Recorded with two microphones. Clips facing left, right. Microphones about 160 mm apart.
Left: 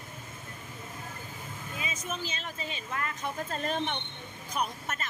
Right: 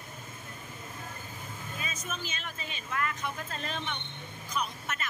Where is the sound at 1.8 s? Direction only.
20° left (ahead or behind).